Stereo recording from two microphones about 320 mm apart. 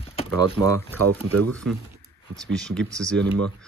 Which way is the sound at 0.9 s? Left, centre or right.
Right.